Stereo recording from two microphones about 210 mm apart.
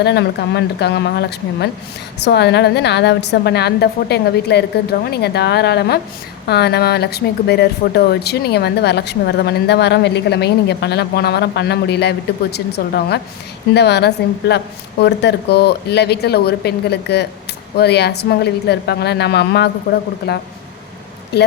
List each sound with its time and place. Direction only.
0.0 s speech: 55° left (ahead or behind)